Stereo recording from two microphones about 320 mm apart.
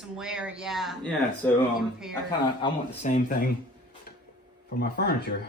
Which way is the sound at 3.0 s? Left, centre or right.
Left.